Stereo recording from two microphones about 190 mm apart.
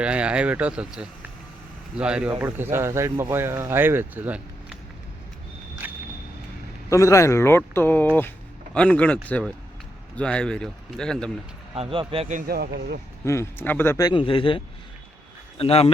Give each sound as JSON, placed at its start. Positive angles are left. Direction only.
{"t": 0.0, "sound": "a man's voice", "side_deg": -5}
{"t": 2.0, "sound": "a man's voice", "side_deg": -5}
{"t": 5.8, "sound": "vehicle", "side_deg": -10}
{"t": 6.9, "sound": "a man's voice", "side_deg": 15}
{"t": 11.7, "sound": "speech", "side_deg": -30}
{"t": 12.3, "sound": "speech", "side_deg": -50}
{"t": 13.2, "sound": "speech", "side_deg": 15}
{"t": 14.1, "sound": "a man's voice", "side_deg": 25}